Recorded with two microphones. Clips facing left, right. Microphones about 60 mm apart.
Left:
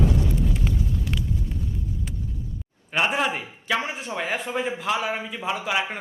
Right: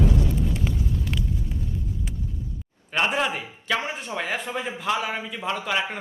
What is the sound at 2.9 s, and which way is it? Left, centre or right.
A man's voice, centre.